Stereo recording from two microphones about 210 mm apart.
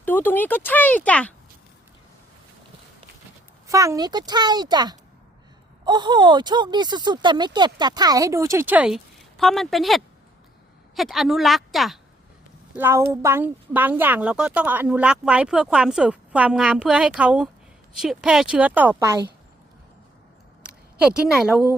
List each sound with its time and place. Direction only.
0.0 s speech: 10° left (ahead or behind)
3.7 s speech: 15° right (ahead or behind)
12.7 s speech: 10° right (ahead or behind)
20.7 s a woman's voice: 5° right (ahead or behind)